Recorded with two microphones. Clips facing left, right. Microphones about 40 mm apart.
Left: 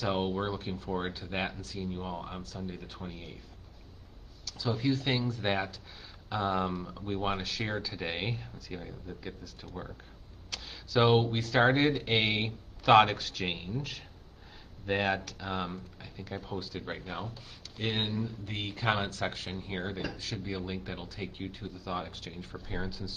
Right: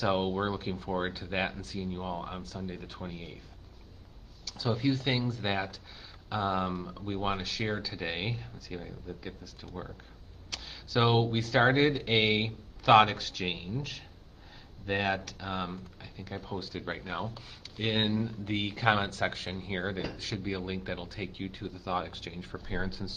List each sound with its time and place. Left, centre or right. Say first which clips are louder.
0.0 s speech: right 2 dB; centre
4.5 s speech: right 1 dB; centre
22.6 s speech: right 2 dB; centre